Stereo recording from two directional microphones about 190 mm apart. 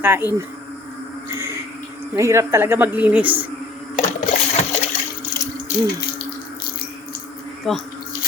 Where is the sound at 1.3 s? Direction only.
15° right (ahead or behind).